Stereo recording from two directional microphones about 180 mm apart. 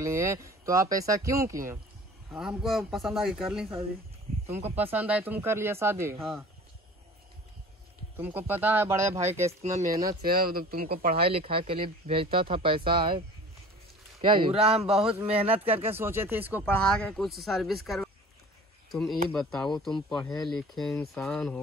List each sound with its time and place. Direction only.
0.0 s speech: 15° right (ahead or behind)
2.3 s speech: centre (ahead or behind)
8.2 s speech: 10° right (ahead or behind)
9.5 s speech: 35° right (ahead or behind)
10.0 s speech: 55° right (ahead or behind)
11.2 s speech: 30° right (ahead or behind)
14.2 s speech: 30° right (ahead or behind)
15.9 s speech: 10° right (ahead or behind)
16.6 s speech: 5° left (ahead or behind)